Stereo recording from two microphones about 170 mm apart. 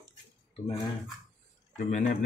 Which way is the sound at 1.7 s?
45° left (ahead or behind).